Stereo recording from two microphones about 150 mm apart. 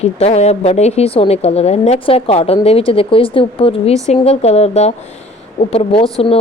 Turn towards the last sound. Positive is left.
turn(degrees=40)  # may be behind; listen again after turning